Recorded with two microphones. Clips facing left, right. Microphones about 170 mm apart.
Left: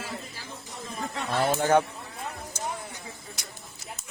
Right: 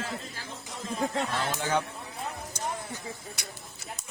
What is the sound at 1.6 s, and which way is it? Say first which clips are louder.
Speech: left 7 dB; 50° left (ahead or behind).